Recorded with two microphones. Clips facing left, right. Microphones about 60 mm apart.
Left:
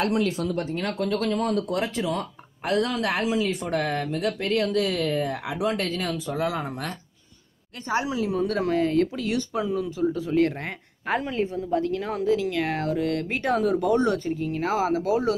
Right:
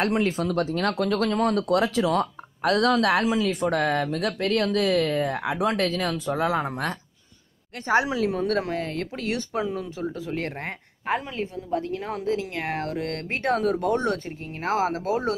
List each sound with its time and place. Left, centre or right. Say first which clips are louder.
0.0 s speech: right 1 dB; right
0.5 s speech: right 3 dB; right
1.8 s speech: right 4 dB; right
3.6 s speech: right 3 dB; right
8.3 s speech: even; right
8.5 s speech: left 3 dB; centre
8.9 s speech: left 5 dB; right
11.4 s a woman's voice: left 4 dB; centre
11.7 s speech: left 1 dB; right
15.0 s speech: left 2 dB; right